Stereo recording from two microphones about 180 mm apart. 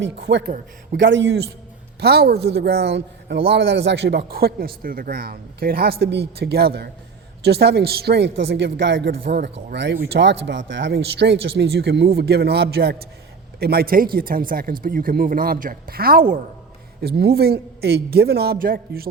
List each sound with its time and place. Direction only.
0.0 s speech: 80° right
2.0 s speech: 65° right (ahead or behind)
9.7 s speech: 80° right; by 19.0 s 55° right (ahead or behind)